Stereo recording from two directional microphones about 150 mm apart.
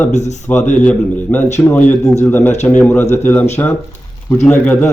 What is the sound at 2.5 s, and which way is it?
Speech, 50° left (ahead or behind).